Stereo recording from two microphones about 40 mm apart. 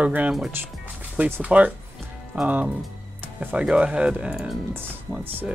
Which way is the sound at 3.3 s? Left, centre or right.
Right.